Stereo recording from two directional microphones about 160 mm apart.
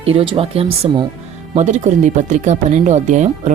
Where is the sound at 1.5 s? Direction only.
50° right (ahead or behind).